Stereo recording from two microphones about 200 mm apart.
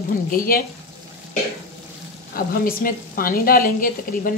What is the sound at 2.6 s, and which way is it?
A woman's voice, 45° left (ahead or behind).